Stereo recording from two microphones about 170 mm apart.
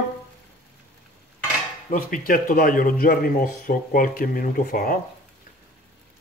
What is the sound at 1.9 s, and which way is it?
Speech, 60° left (ahead or behind).